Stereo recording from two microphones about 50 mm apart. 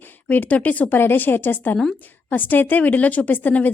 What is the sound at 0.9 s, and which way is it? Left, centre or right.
Speech, left.